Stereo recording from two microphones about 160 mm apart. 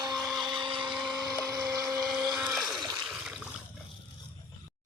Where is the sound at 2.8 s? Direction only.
25° right (ahead or behind).